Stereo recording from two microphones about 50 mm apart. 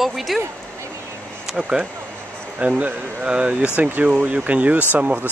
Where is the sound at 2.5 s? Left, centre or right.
Right.